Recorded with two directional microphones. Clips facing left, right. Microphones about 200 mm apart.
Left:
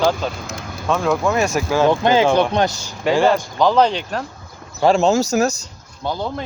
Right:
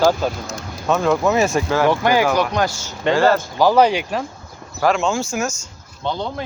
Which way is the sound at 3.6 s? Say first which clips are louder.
Right 2 dB; 10° right (ahead or behind).